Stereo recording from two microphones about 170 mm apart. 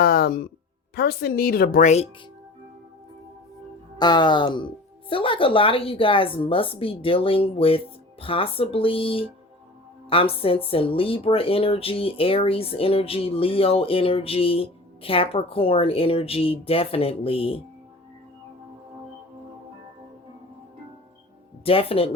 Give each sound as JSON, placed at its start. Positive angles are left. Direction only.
{"t": 0.0, "sound": "a sound", "side_deg": 60}
{"t": 0.9, "sound": "a woman's voice", "side_deg": 70}
{"t": 3.9, "sound": "speech", "side_deg": 25}
{"t": 21.6, "sound": "speech", "side_deg": 35}